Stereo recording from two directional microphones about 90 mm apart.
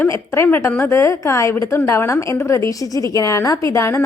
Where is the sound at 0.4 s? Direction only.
25° left (ahead or behind).